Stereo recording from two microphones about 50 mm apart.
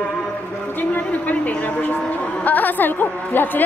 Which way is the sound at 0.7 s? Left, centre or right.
Left.